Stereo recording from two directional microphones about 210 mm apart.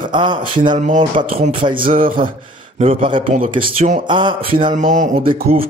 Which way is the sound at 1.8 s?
40° right (ahead or behind).